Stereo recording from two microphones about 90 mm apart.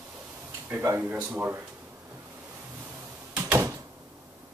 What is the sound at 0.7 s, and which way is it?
Speech, 25° right (ahead or behind).